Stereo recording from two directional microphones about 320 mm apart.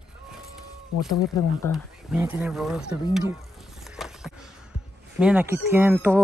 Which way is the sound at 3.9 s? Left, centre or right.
Centre.